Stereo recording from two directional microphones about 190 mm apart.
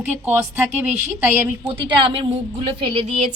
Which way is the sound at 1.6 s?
30° right (ahead or behind).